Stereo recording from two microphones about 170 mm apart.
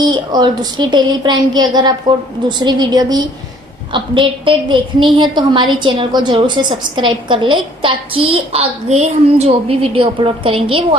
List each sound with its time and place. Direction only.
0.1 s a woman's voice: 25° right (ahead or behind)